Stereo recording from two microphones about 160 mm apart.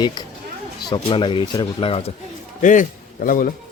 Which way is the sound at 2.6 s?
55° left (ahead or behind).